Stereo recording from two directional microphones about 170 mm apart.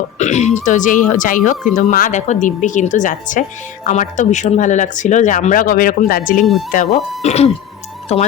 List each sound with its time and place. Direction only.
0.2 s speech: 40° left (ahead or behind)
6.4 s speech: centre (ahead or behind)
7.2 s speech: 40° left (ahead or behind)